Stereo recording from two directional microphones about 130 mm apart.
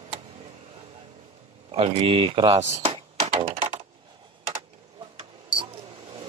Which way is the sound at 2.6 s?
60° right (ahead or behind).